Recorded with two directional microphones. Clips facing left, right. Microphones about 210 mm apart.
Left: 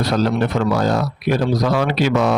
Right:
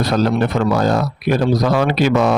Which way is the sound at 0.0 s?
50° right (ahead or behind).